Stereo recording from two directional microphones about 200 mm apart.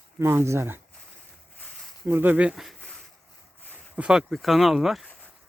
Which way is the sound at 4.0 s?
5° right (ahead or behind).